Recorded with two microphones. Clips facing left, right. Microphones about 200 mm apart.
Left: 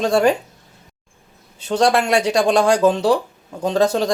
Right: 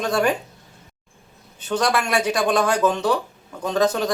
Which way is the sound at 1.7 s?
30° left (ahead or behind).